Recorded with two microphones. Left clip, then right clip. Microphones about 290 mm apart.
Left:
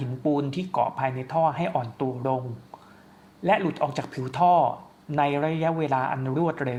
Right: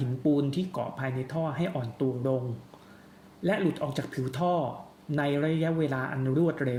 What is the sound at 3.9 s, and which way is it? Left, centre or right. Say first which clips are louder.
Speech: left 3 dB; centre.